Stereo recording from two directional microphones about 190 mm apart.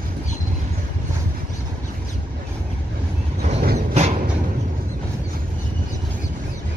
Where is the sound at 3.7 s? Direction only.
35° right (ahead or behind).